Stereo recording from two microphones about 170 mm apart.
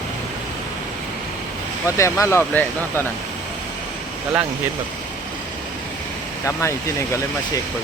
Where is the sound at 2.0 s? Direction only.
15° left (ahead or behind).